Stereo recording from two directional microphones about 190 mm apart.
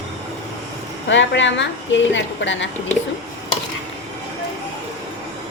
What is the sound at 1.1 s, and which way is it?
A woman's voice, 75° left (ahead or behind).